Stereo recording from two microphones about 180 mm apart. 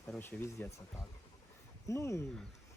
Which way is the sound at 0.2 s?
10° left (ahead or behind).